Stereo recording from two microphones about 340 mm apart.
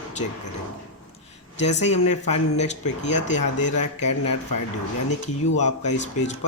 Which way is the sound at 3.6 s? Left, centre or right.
Left.